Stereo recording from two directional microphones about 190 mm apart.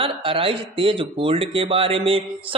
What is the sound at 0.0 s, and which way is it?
A man's voice, 30° right (ahead or behind).